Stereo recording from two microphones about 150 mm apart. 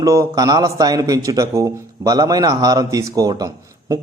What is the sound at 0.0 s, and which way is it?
A man's voice, 20° right (ahead or behind).